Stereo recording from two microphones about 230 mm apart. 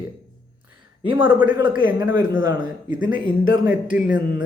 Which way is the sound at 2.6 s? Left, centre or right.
Left.